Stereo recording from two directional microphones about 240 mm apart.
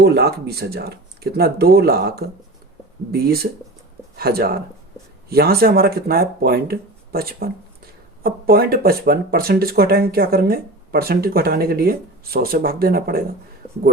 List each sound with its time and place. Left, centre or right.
0.0 s speech: right